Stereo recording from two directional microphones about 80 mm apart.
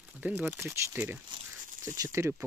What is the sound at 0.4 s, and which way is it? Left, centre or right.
Speech, right.